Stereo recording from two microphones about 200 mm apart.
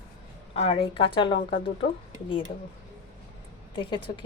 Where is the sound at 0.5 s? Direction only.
30° left (ahead or behind).